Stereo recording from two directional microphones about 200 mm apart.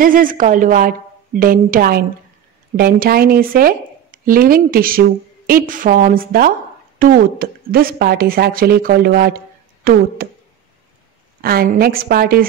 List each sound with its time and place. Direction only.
0.0 s speech: 45° right (ahead or behind)
11.4 s speech: 50° right (ahead or behind)